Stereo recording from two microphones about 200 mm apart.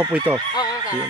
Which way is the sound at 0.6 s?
20° left (ahead or behind).